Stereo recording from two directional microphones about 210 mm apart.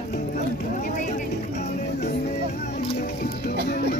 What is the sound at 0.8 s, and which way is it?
Music, 40° left (ahead or behind).